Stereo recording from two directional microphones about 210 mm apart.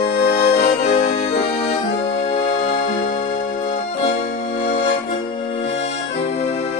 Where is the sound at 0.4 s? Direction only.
35° left (ahead or behind).